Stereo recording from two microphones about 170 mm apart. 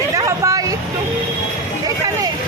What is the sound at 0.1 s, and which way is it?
Vehicle, 20° right (ahead or behind).